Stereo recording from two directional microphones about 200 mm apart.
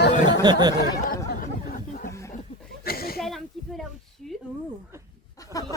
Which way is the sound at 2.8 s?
50° left (ahead or behind).